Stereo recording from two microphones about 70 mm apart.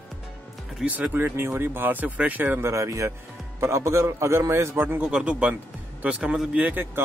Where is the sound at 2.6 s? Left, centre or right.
Right.